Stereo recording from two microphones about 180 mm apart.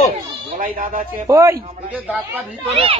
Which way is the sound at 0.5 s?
50° right (ahead or behind).